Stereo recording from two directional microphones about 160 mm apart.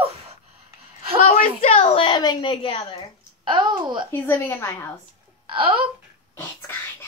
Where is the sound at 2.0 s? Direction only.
30° left (ahead or behind).